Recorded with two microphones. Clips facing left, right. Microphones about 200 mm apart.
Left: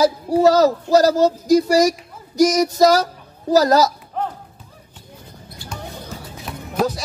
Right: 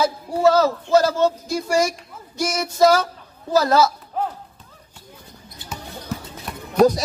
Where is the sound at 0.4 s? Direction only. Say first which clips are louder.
Left 3 dB; 40° left (ahead or behind).